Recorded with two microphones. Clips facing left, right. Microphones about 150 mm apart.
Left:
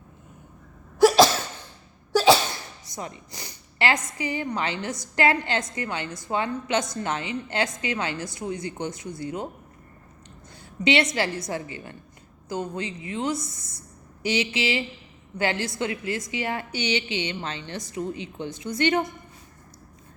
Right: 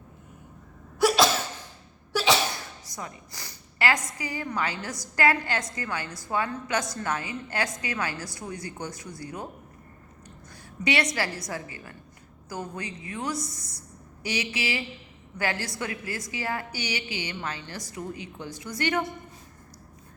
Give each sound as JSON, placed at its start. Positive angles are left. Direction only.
{"t": 2.8, "sound": "a woman's voice", "side_deg": 25}
{"t": 10.8, "sound": "a woman's voice", "side_deg": 25}